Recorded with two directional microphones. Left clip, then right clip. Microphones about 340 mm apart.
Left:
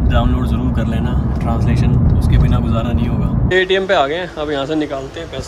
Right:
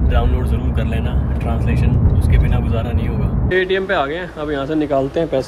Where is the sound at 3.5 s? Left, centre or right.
Centre.